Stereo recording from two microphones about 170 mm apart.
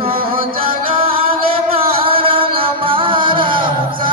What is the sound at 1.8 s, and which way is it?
Music, 30° right (ahead or behind).